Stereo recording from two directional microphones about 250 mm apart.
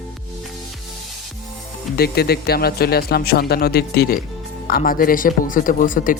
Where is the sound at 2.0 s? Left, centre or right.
Left.